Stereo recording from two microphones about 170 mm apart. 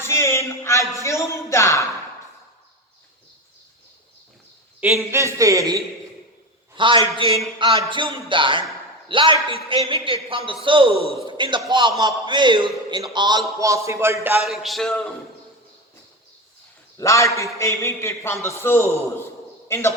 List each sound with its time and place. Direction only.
0.0 s speech: 15° left (ahead or behind)
4.8 s a man's voice: 15° right (ahead or behind)
6.7 s a man's voice: 30° right (ahead or behind)
10.9 s a man's voice: 35° left (ahead or behind)
11.3 s a man's voice: 30° right (ahead or behind)
14.4 s a sound: centre (ahead or behind)
17.0 s a man's voice: 15° left (ahead or behind)